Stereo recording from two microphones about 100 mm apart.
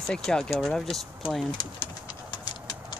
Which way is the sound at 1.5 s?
45° left (ahead or behind).